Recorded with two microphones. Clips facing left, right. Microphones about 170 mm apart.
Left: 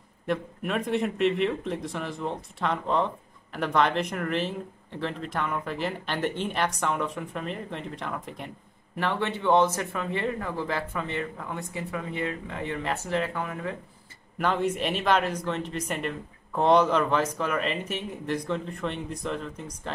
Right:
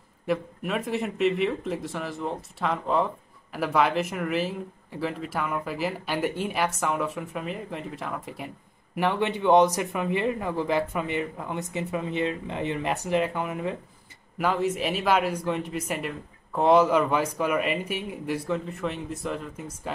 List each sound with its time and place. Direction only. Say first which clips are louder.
0.3 s speech: right 1 dB; 5° right (ahead or behind)
8.9 s speech: right 3 dB; 15° right (ahead or behind)
14.4 s speech: right 1 dB; 5° right (ahead or behind)